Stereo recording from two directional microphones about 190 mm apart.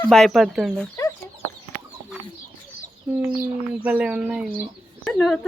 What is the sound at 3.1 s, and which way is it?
Speech, 10° right (ahead or behind).